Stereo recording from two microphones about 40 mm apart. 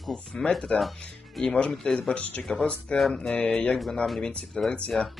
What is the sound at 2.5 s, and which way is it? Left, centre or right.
Speech, left.